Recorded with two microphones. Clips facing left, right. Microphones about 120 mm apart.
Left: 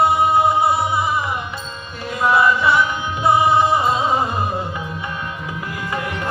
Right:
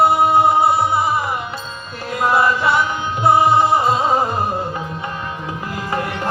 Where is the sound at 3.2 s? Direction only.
30° right (ahead or behind).